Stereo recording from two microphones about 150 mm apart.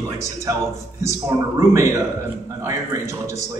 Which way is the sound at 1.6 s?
20° right (ahead or behind).